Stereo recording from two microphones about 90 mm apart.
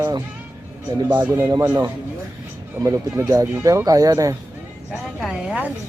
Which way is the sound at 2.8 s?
35° right (ahead or behind).